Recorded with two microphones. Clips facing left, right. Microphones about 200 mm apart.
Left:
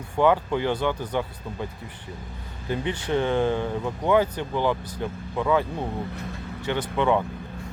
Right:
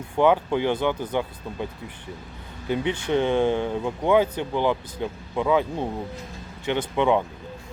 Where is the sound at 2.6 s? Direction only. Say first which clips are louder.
Right 2 dB; 15° right (ahead or behind).